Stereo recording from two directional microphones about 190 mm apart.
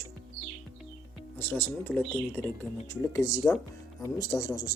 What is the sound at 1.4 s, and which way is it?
Speech, 10° left (ahead or behind).